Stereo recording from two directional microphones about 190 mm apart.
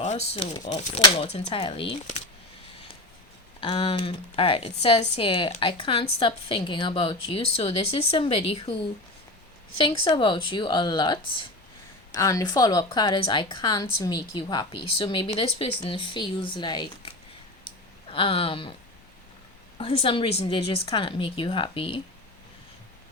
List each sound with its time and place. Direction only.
0.0 s speech: 35° left (ahead or behind)
3.6 s speech: 30° left (ahead or behind)
19.8 s speech: 30° left (ahead or behind)